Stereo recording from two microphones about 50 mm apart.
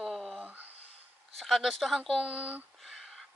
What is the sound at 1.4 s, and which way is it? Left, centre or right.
Speech, centre.